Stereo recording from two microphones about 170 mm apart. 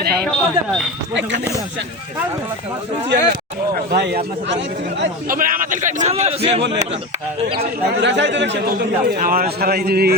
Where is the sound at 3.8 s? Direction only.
70° right (ahead or behind).